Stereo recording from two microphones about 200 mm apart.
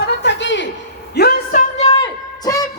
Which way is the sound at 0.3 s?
65° left (ahead or behind).